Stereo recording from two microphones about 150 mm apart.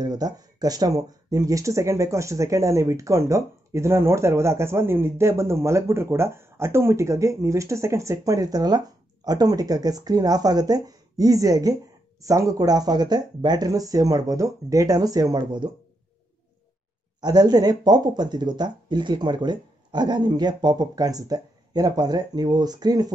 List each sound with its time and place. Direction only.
0.0 s speech: 25° right (ahead or behind)
17.2 s speech: 25° right (ahead or behind)